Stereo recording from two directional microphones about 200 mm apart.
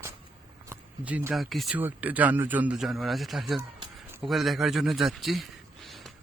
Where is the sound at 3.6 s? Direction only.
20° right (ahead or behind).